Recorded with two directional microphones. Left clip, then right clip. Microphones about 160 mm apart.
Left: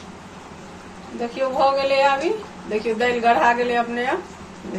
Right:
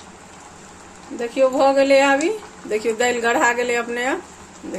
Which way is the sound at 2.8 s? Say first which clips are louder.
Left 1 dB; 90° right.